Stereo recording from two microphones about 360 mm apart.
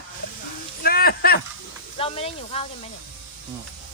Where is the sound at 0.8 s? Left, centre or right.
Left.